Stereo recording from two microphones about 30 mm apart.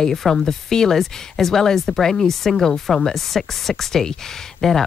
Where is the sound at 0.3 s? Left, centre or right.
Centre.